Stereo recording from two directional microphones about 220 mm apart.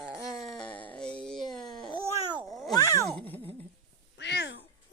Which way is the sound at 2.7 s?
15° left (ahead or behind).